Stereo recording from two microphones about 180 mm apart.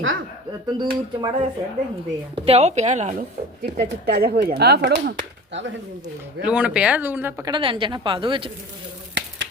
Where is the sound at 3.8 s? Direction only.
65° right (ahead or behind).